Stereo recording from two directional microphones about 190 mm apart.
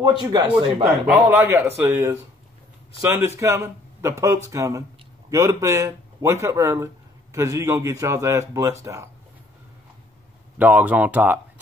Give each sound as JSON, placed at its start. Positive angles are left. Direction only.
{"t": 0.0, "sound": "speech", "side_deg": -20}
{"t": 1.0, "sound": "a man's voice", "side_deg": -10}
{"t": 10.6, "sound": "a man's voice", "side_deg": -10}